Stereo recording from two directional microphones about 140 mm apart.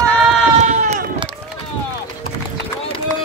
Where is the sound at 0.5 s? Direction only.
60° right (ahead or behind).